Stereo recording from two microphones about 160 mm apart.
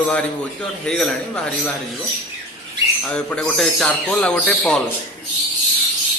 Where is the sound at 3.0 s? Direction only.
5° left (ahead or behind).